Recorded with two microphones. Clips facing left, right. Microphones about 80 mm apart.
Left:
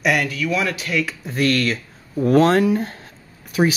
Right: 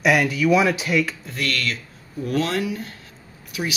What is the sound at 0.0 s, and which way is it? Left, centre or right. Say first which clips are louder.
Speech: right 2 dB; centre.